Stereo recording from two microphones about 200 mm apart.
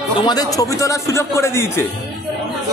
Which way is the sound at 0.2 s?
20° left (ahead or behind).